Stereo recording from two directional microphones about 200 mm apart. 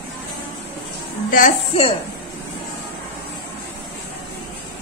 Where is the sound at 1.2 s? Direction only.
40° left (ahead or behind).